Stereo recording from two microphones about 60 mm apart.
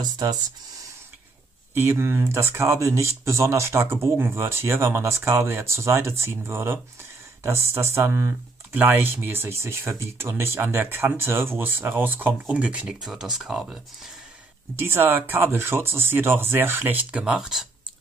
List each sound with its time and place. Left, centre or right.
0.0 s speech: right
1.7 s speech: right
12.5 s speech: centre
13.0 s speech: centre
14.8 s speech: right
16.8 s speech: right
17.2 s speech: centre